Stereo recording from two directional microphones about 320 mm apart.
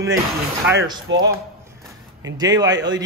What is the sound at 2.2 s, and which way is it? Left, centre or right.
Speech, centre.